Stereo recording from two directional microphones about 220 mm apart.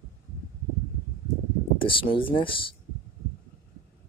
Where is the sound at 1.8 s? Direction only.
25° left (ahead or behind).